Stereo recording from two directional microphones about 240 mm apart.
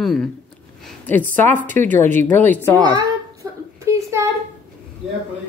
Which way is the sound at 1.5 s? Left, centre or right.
Right.